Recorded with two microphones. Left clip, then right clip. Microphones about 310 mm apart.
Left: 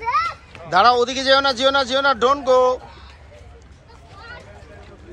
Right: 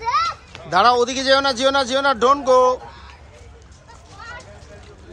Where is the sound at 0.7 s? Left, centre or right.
Centre.